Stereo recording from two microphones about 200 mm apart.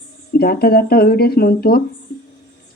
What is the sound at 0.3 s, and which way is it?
Speech, 50° left (ahead or behind).